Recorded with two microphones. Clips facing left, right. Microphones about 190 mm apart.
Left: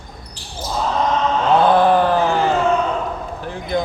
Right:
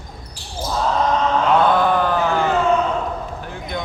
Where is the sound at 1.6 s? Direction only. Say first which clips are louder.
Left 3 dB; 30° left (ahead or behind).